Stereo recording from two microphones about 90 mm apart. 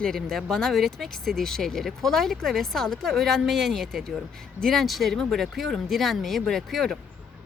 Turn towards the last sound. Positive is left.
turn(degrees=5)  # may be behind; listen again after turning